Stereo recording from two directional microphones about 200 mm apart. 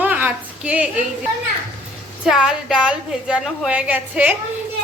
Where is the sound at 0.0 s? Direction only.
10° right (ahead or behind).